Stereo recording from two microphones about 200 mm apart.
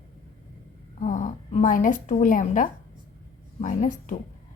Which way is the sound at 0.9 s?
35° left (ahead or behind).